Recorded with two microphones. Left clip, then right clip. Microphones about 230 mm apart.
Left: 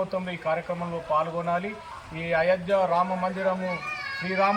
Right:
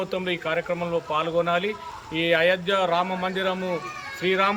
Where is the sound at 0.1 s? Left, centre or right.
Right.